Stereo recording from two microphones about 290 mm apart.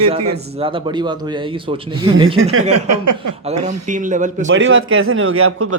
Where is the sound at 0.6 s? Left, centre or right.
Centre.